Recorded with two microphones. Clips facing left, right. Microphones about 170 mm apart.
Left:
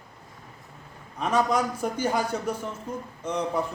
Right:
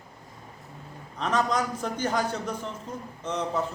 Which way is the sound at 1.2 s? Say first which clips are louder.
Left 2 dB; 10° left (ahead or behind).